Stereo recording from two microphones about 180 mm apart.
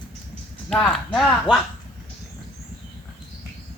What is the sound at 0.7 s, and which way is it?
Speech, 5° left (ahead or behind).